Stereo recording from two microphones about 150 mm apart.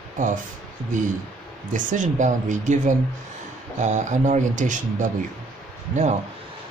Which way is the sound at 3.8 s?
55° right (ahead or behind).